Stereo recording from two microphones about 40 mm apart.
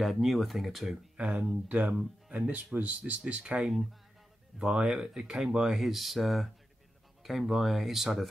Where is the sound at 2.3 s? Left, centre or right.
Right.